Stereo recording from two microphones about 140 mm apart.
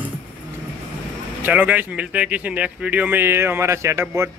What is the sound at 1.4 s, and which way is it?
A man's voice, 10° right (ahead or behind).